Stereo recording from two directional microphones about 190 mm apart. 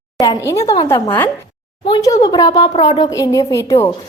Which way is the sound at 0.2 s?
15° left (ahead or behind).